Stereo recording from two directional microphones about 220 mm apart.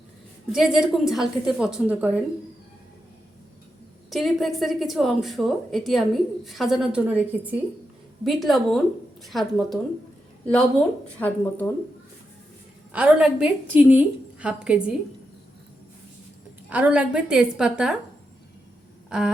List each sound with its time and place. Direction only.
0.5 s a woman's voice: centre (ahead or behind)
4.1 s a woman's voice: centre (ahead or behind)
12.9 s a woman's voice: 5° right (ahead or behind)
16.6 s a woman's voice: 5° right (ahead or behind)